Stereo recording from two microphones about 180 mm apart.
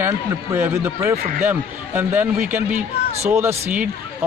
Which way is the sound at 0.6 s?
10° right (ahead or behind).